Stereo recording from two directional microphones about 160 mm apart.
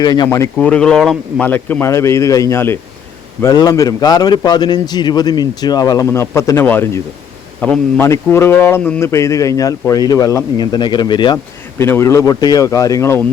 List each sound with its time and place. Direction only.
0.0 s a man's voice: 25° left (ahead or behind)
0.5 s a man's voice: 5° left (ahead or behind); by 11.3 s 30° left (ahead or behind)
11.8 s a man's voice: 15° left (ahead or behind)